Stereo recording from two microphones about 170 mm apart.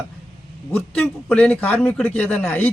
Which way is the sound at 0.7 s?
10° left (ahead or behind).